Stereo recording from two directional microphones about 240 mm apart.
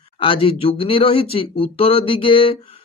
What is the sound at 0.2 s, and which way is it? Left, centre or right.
Speech, left.